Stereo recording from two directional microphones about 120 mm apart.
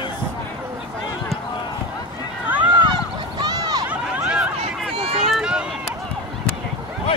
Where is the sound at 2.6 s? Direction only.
40° right (ahead or behind).